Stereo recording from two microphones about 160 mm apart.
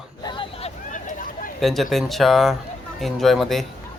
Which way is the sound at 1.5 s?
Centre (ahead or behind).